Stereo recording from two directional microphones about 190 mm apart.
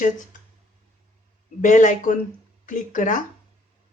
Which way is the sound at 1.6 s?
40° left (ahead or behind).